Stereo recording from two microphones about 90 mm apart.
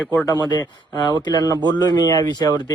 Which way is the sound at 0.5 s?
55° left (ahead or behind).